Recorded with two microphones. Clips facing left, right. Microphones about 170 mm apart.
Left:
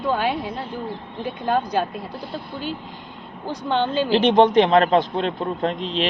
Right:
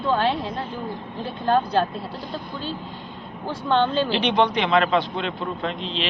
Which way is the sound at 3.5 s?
15° left (ahead or behind).